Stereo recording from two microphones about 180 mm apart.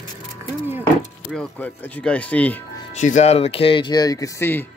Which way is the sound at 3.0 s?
40° left (ahead or behind).